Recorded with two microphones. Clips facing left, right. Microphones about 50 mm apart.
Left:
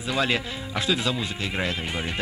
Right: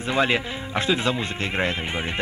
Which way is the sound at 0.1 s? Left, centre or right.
Right.